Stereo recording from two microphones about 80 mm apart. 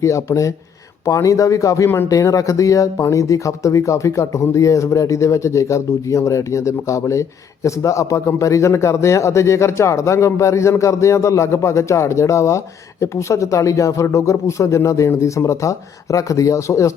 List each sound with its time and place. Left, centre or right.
0.0 s speech: left